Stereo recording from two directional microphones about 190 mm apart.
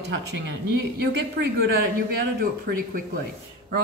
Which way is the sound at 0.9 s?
55° right (ahead or behind).